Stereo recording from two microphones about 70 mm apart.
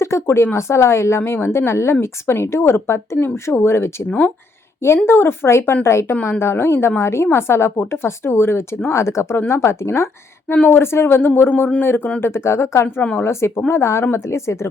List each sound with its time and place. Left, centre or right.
0.0 s a woman's voice: left
5.0 s a woman's voice: left
10.5 s a woman's voice: left